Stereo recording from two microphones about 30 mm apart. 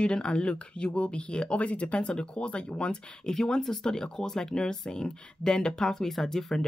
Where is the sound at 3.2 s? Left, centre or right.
Centre.